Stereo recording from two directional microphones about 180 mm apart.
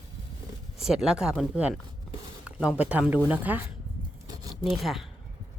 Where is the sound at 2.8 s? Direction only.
10° right (ahead or behind).